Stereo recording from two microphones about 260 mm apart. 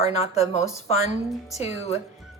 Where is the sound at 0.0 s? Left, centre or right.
Left.